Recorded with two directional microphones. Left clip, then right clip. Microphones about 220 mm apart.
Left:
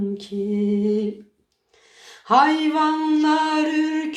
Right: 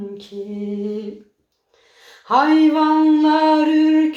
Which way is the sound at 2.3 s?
30° left (ahead or behind).